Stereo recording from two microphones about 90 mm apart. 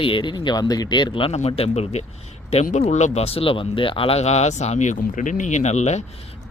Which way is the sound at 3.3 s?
85° left.